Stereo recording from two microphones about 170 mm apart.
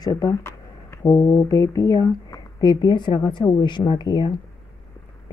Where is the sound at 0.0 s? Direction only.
20° left (ahead or behind).